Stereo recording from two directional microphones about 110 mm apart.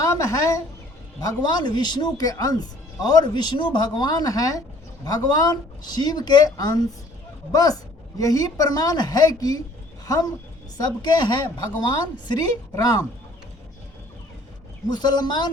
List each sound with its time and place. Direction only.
0.0 s a woman's voice: 30° left (ahead or behind)
12.7 s speech: 35° left (ahead or behind)
14.8 s speech: 40° left (ahead or behind)